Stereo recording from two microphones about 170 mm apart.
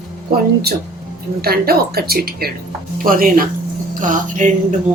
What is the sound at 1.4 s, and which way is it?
A woman's voice, 65° right (ahead or behind).